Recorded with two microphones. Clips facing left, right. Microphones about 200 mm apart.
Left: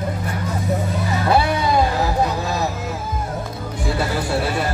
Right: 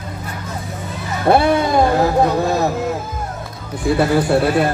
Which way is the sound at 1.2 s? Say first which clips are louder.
Right 6 dB; 55° right (ahead or behind).